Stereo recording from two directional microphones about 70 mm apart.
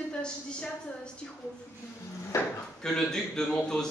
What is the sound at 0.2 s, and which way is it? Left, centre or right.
Speech, centre.